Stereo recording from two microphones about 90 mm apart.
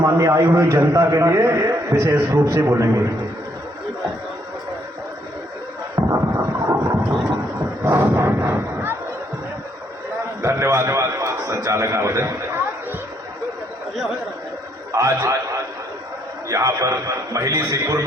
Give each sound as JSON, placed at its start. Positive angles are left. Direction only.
{"t": 0.0, "sound": "a man's voice", "side_deg": -35}
{"t": 6.1, "sound": "a sound", "side_deg": -35}
{"t": 7.9, "sound": "artillery fire", "side_deg": -25}
{"t": 10.4, "sound": "a man's voice", "side_deg": -30}
{"t": 14.9, "sound": "a man's voice", "side_deg": -35}
{"t": 16.5, "sound": "a man's voice", "side_deg": -35}